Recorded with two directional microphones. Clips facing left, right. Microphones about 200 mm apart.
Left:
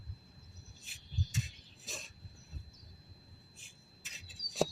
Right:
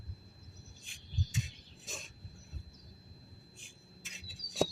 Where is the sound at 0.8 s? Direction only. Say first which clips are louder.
Right 1 dB; centre (ahead or behind).